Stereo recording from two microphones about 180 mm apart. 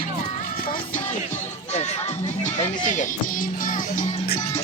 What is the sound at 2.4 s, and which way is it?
Speech, 40° left (ahead or behind).